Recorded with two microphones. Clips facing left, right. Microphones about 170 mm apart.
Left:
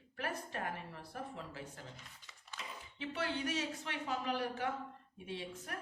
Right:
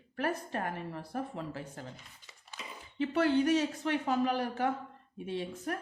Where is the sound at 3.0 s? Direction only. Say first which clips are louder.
Right 12 dB; 45° right (ahead or behind).